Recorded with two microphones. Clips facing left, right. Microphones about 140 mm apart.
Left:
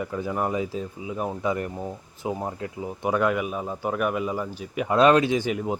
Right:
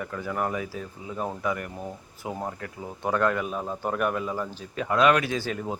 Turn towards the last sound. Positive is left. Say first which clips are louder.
# left 5 dB
turn(degrees=15)  # may be behind; listen again after turning